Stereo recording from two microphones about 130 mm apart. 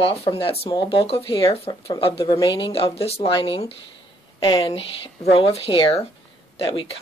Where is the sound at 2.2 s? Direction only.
35° left (ahead or behind).